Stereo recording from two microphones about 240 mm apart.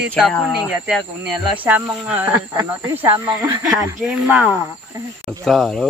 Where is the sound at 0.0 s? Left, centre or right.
Centre.